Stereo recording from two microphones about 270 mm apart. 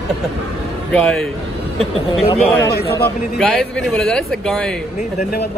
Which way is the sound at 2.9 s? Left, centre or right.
Centre.